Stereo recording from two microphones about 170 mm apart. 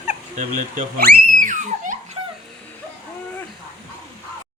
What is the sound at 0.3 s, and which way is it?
A child's voice, 50° right (ahead or behind).